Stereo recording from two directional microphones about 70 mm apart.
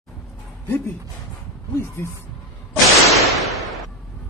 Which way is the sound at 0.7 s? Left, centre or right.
Left.